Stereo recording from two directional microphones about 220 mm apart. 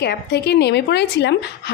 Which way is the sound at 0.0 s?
50° left (ahead or behind).